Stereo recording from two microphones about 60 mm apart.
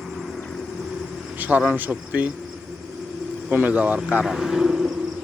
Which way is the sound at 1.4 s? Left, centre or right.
Right.